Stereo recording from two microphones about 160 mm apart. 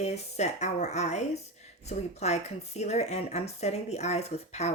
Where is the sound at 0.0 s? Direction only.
45° left (ahead or behind).